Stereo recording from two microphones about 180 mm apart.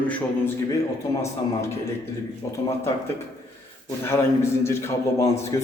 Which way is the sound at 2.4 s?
15° left (ahead or behind).